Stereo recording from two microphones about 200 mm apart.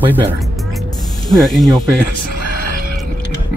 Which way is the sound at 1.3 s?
Centre (ahead or behind).